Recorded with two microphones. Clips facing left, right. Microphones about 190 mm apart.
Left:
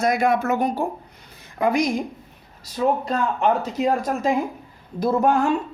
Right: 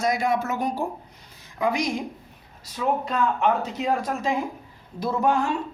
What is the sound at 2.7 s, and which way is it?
Speech, 40° left (ahead or behind).